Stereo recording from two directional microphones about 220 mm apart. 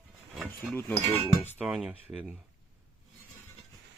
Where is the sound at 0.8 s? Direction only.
10° left (ahead or behind).